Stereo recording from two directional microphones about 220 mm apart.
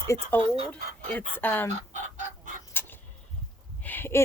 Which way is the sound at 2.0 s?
35° right (ahead or behind).